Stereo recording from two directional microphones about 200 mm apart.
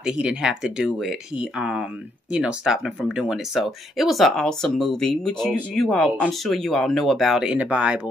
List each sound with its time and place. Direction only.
0.0 s speech: 5° right (ahead or behind)